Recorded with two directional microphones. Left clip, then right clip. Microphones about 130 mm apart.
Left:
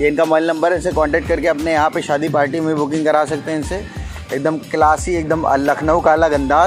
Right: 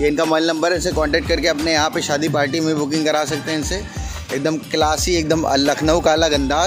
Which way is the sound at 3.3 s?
10° right (ahead or behind).